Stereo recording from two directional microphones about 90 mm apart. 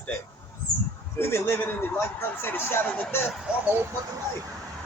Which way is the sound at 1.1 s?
25° left (ahead or behind).